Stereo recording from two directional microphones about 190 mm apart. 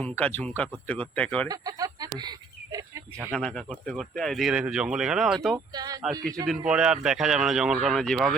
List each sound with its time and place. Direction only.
0.0 s speech: 10° left (ahead or behind)
1.5 s speech: 20° right (ahead or behind)
3.2 s speech: 5° left (ahead or behind)
5.7 s speech: 20° right (ahead or behind)
6.7 s speech: 5° right (ahead or behind)